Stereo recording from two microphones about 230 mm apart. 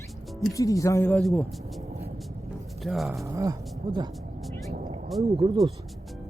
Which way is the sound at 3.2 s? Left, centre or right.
Centre.